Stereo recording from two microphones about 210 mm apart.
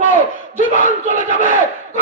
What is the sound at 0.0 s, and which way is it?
Battle cry, 40° left (ahead or behind).